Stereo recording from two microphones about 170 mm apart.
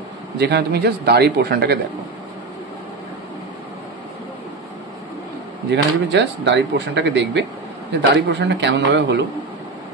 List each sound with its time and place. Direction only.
0.4 s speech: 75° right (ahead or behind)
5.7 s speech: 90° right